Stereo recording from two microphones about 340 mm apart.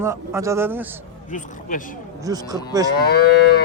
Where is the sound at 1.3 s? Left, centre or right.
Left.